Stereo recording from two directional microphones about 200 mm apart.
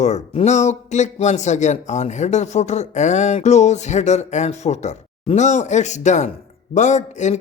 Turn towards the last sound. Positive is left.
turn(degrees=35)  # may be behind; listen again after turning